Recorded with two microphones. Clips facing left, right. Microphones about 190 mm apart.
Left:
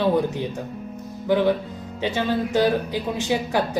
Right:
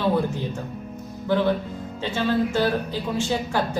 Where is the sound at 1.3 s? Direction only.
15° left (ahead or behind).